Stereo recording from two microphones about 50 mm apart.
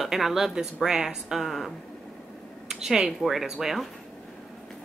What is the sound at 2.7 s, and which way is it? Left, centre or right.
Speech, centre.